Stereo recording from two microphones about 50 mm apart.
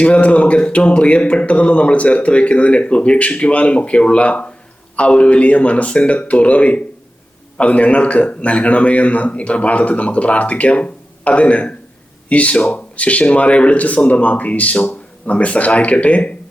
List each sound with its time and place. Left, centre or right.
0.0 s speech: left